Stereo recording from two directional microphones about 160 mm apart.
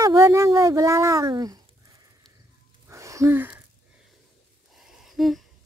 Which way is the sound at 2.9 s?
20° right (ahead or behind).